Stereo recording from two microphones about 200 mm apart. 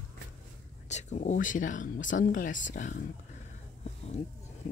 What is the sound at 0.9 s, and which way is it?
Speech, 35° left (ahead or behind).